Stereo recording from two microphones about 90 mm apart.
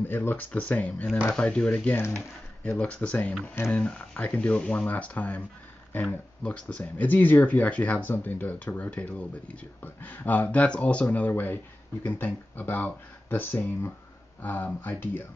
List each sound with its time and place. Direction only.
0.0 s speech: 25° left (ahead or behind)
2.0 s speech: 30° left (ahead or behind)
2.8 s speech: 15° left (ahead or behind)
6.4 s speech: 10° left (ahead or behind)